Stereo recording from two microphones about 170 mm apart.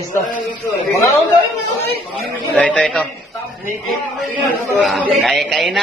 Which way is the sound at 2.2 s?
5° left (ahead or behind).